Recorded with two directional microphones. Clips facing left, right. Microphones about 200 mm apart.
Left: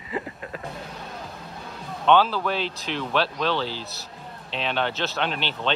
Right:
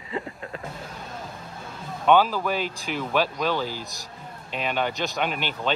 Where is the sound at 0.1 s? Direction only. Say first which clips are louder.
Left 1 dB; 5° left (ahead or behind).